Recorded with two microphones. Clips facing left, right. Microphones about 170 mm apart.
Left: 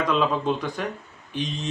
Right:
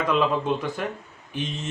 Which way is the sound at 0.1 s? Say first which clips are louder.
Right 3 dB; 5° right (ahead or behind).